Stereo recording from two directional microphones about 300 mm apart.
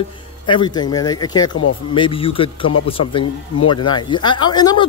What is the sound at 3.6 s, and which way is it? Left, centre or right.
Speech, left.